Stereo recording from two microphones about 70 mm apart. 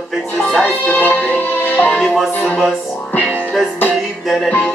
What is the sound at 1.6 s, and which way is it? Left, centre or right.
Music, left.